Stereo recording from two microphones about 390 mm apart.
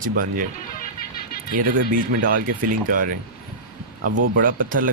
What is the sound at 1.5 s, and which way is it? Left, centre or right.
Speech, right.